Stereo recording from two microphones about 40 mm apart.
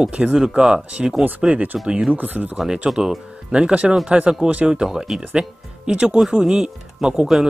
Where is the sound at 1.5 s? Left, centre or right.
Right.